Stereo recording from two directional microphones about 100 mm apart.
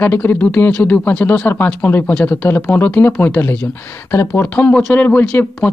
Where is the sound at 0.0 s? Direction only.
20° left (ahead or behind).